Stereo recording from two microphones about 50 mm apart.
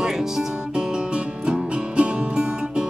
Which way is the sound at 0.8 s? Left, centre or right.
Centre.